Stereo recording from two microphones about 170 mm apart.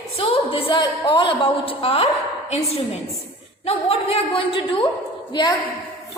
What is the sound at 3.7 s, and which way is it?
A woman's voice, 35° left (ahead or behind).